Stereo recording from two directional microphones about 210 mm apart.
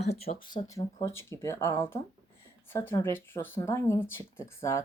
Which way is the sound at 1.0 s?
15° left (ahead or behind).